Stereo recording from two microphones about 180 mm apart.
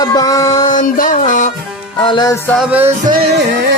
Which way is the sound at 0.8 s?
45° left (ahead or behind).